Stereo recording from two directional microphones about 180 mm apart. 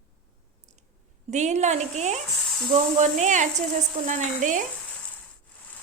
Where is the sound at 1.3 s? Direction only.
40° right (ahead or behind).